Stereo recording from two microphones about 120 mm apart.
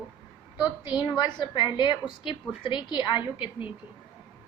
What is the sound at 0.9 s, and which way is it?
A woman's voice, 35° left (ahead or behind).